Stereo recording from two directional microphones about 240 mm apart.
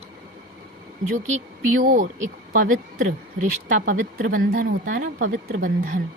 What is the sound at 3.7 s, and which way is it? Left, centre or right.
Speech, right.